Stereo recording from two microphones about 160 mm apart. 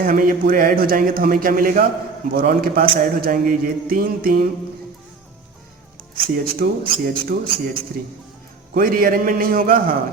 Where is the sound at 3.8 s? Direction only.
65° right (ahead or behind).